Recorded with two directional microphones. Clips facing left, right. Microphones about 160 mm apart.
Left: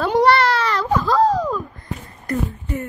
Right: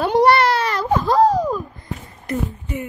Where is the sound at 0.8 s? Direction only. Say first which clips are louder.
Right 2 dB; 25° right (ahead or behind).